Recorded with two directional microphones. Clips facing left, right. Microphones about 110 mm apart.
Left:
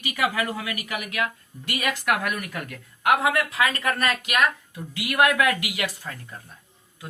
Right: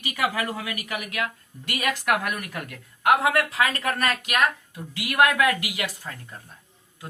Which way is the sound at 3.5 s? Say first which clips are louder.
Even; 35° right (ahead or behind).